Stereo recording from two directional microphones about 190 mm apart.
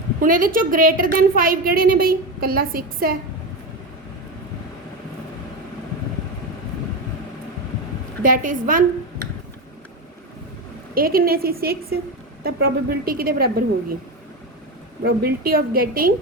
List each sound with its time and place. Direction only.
0.2 s a woman's voice: 45° right (ahead or behind)
8.2 s a woman's voice: 45° right (ahead or behind)
10.9 s a woman's voice: 50° right (ahead or behind)
15.0 s a woman's voice: 50° right (ahead or behind)